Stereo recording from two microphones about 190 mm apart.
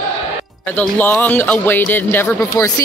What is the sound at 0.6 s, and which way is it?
Speech, 10° left (ahead or behind).